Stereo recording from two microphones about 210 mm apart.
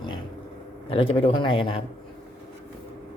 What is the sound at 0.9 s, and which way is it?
Speech, 25° left (ahead or behind).